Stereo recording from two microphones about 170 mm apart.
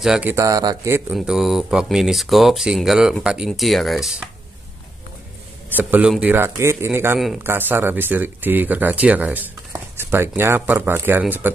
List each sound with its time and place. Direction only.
0.0 s speech: 5° right (ahead or behind)
0.3 s speech: 20° right (ahead or behind)
1.1 s speech: centre (ahead or behind)
5.7 s speech: 10° right (ahead or behind)